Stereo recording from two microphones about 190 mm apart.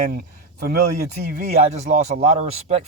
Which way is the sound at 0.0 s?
40° right (ahead or behind).